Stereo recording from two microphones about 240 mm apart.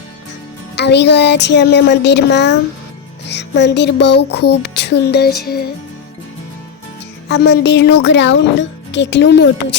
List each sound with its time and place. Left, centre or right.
0.8 s speech: left
7.3 s speech: left